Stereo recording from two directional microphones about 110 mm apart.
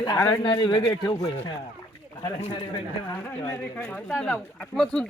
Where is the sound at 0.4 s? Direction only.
45° left (ahead or behind).